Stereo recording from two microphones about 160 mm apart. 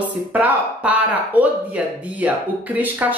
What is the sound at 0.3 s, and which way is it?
A woman's voice, 10° right (ahead or behind).